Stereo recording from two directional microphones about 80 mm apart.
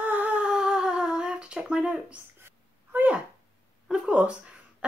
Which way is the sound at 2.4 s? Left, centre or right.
Right.